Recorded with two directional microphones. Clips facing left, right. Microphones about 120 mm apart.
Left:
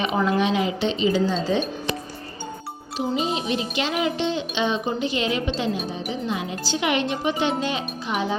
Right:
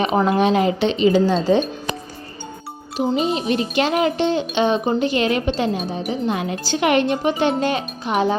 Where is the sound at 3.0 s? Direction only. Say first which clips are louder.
Right 5 dB; 50° right (ahead or behind).